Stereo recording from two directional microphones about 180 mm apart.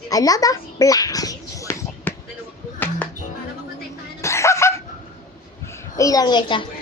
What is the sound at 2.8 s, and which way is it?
Music, 10° left (ahead or behind).